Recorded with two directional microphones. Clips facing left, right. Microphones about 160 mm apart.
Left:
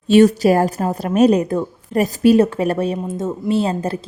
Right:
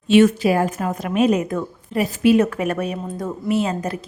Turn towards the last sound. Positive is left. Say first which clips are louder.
# left 3 dB
turn(degrees=30)  # may be behind; listen again after turning